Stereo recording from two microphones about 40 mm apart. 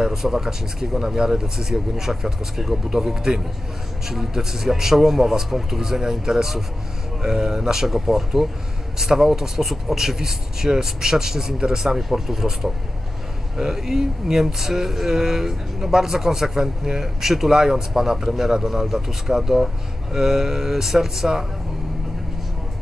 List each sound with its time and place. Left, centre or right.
0.0 s speech: centre